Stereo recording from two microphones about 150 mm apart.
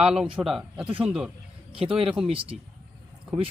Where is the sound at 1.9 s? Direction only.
35° right (ahead or behind).